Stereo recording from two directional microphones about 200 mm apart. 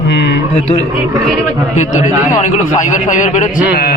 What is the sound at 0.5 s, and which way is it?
Speech, 30° left (ahead or behind).